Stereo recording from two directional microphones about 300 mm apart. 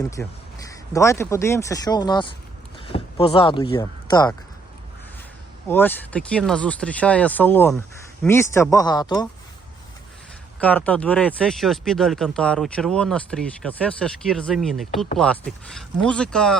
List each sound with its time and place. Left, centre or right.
0.2 s speech: centre
5.6 s speech: centre
10.6 s speech: centre